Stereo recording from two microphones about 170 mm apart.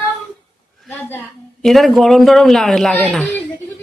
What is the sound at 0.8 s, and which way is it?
Speech, 10° left (ahead or behind).